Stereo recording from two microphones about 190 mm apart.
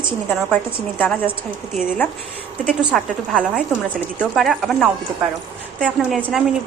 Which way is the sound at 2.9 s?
Centre (ahead or behind).